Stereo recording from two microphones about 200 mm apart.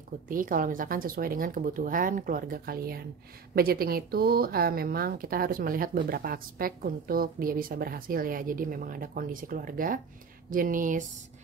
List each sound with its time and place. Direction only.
0.3 s speech: 45° right (ahead or behind)